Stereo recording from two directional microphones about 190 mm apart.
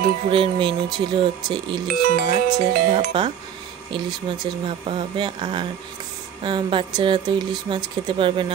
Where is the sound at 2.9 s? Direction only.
25° right (ahead or behind).